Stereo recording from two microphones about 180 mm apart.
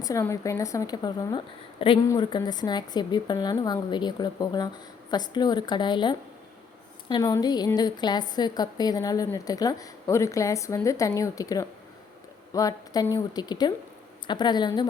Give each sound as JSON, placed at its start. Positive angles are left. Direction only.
{"t": 0.0, "sound": "a woman's voice", "side_deg": 15}